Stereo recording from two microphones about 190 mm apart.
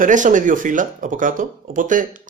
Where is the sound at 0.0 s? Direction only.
40° right (ahead or behind).